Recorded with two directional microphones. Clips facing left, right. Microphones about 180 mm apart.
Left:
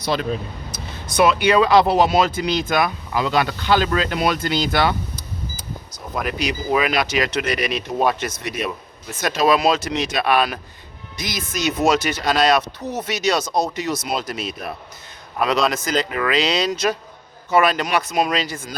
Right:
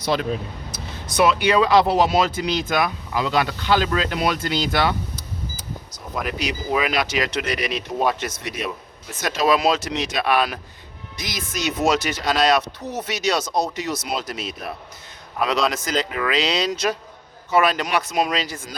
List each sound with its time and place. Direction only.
0.0 s speech: 15° right (ahead or behind)
1.0 s speech: 55° left (ahead or behind)
2.6 s speech: 50° left (ahead or behind)
6.1 s speech: 50° left (ahead or behind)